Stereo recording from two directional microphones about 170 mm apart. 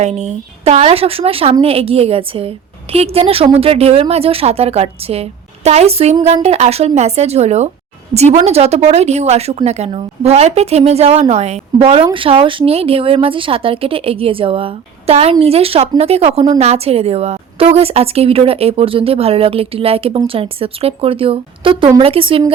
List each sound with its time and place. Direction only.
0.0 s a woman's voice: 40° right (ahead or behind)